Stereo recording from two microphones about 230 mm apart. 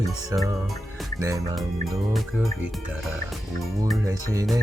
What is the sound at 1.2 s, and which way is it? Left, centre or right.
Speech, centre.